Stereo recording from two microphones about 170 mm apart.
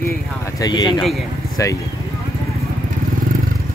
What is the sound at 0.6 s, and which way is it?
Speech, 25° left (ahead or behind).